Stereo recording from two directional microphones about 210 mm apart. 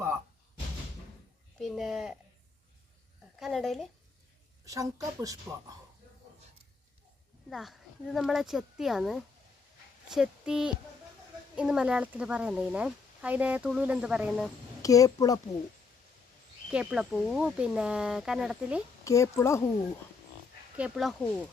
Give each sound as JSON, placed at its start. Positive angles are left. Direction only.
{"t": 1.5, "sound": "speech", "side_deg": 0}
{"t": 3.3, "sound": "speech", "side_deg": 0}
{"t": 4.6, "sound": "speech", "side_deg": -15}
{"t": 7.5, "sound": "speech", "side_deg": 0}
{"t": 14.8, "sound": "speech", "side_deg": 15}
{"t": 16.7, "sound": "speech", "side_deg": -5}
{"t": 19.0, "sound": "a woman's voice", "side_deg": 15}
{"t": 20.7, "sound": "speech", "side_deg": -5}